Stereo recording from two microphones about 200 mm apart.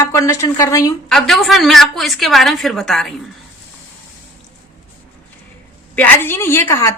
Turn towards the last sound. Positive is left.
turn(degrees=10)  # may be behind; listen again after turning